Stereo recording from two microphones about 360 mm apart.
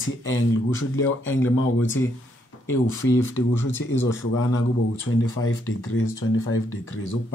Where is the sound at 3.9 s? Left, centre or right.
Centre.